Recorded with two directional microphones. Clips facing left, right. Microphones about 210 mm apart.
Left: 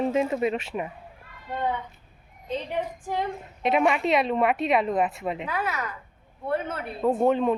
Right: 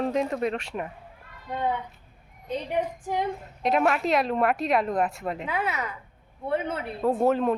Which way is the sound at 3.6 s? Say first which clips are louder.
Left 1 dB; centre (ahead or behind).